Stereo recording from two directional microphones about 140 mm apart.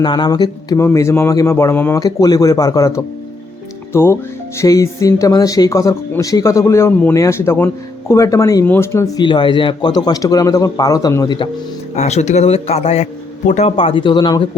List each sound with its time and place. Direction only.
0.0 s speech: 30° left (ahead or behind)
11.9 s a man's voice: 55° left (ahead or behind); by 14.4 s 30° left (ahead or behind)